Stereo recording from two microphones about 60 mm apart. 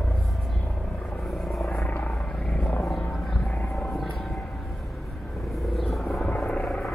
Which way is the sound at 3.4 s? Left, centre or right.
Left.